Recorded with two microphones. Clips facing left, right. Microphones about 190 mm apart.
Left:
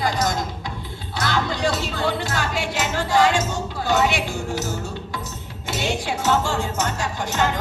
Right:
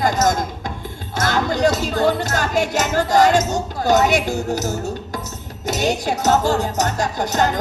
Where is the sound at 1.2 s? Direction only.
45° right (ahead or behind).